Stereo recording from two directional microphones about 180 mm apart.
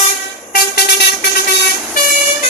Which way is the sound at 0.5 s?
60° left (ahead or behind).